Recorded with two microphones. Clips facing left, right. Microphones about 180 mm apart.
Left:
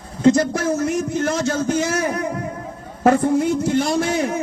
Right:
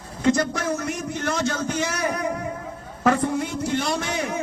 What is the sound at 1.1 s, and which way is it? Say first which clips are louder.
Speech: left 5 dB; 40° left (ahead or behind).